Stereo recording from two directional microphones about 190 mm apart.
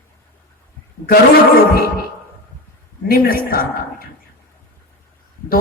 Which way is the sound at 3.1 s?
50° left (ahead or behind).